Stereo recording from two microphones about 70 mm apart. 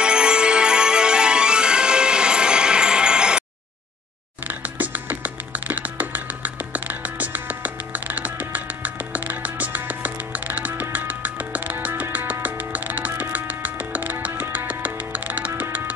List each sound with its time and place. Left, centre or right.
0.0 s music: centre
4.5 s music: right